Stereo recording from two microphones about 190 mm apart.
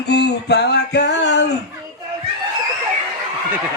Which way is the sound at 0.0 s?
60° left (ahead or behind).